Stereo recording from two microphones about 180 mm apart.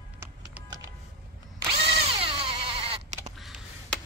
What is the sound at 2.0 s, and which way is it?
Bleat, 30° right (ahead or behind).